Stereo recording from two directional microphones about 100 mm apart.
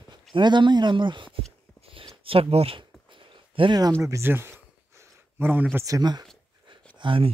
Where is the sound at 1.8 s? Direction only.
65° right (ahead or behind).